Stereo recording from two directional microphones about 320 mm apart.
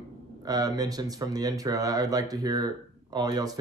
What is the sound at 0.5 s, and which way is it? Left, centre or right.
Speech, centre.